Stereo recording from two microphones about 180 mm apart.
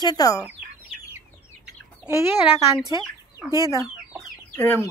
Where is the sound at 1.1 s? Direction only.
15° right (ahead or behind).